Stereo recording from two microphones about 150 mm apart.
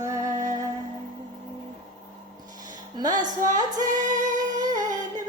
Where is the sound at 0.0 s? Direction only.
20° right (ahead or behind).